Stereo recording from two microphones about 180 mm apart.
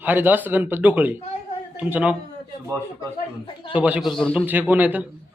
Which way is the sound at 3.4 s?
25° left (ahead or behind).